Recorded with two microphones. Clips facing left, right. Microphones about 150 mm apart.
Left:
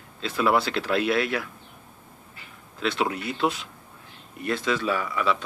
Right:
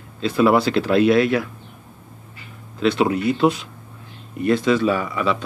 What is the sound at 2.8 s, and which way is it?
Speech, 5° right (ahead or behind).